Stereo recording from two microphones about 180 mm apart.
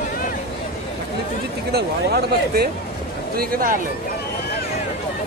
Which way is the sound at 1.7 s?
60° right (ahead or behind).